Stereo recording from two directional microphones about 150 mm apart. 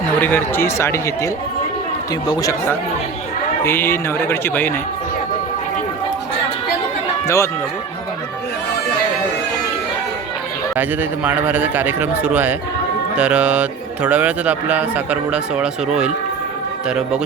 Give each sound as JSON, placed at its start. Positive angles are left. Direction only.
{"t": 0.2, "sound": "speech", "side_deg": 15}
{"t": 2.3, "sound": "speech", "side_deg": 20}
{"t": 7.3, "sound": "speech", "side_deg": 20}
{"t": 10.8, "sound": "speech", "side_deg": -10}